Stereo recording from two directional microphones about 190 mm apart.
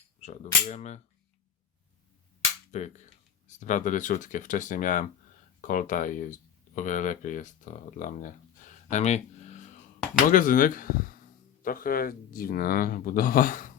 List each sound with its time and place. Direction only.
0.2 s speech: 35° left (ahead or behind)
2.7 s speech: 35° left (ahead or behind)